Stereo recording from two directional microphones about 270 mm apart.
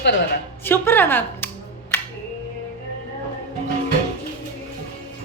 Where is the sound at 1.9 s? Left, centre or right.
Centre.